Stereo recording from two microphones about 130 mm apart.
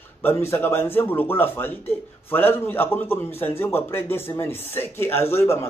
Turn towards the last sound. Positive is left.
turn(degrees=20)  # may be behind; listen again after turning